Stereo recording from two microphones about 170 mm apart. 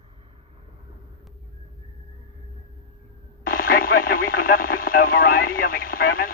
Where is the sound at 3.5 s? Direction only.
60° left (ahead or behind).